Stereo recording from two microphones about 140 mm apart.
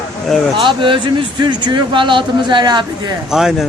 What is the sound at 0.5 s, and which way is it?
Speech, 35° right (ahead or behind).